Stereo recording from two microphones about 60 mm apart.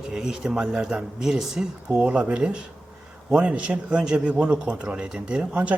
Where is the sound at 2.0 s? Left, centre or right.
Centre.